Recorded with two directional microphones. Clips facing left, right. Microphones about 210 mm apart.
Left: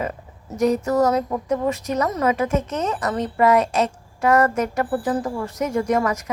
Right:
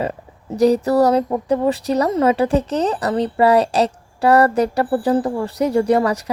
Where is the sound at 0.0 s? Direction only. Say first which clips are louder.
Right 4 dB; 35° right (ahead or behind).